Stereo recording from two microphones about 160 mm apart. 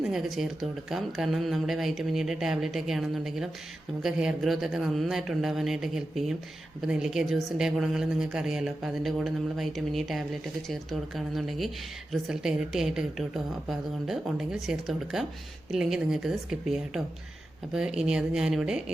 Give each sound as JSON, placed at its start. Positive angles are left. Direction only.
{"t": 0.1, "sound": "speech", "side_deg": 0}